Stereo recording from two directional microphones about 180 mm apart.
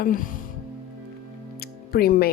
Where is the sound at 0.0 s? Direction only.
50° left (ahead or behind).